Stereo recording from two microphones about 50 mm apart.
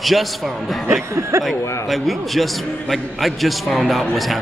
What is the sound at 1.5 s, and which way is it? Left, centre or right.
A man's voice, centre.